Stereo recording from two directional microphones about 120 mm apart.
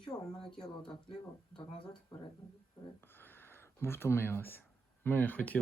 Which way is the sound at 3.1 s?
20° left (ahead or behind).